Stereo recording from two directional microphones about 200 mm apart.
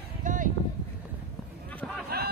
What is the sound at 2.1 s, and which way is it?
Snicker, 50° right (ahead or behind).